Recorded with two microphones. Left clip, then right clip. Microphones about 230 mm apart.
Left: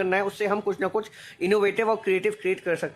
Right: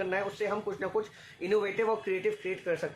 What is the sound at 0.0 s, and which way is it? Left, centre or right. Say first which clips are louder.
Speech: left 7 dB; left.